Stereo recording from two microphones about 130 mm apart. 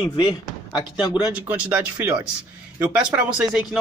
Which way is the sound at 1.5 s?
10° right (ahead or behind).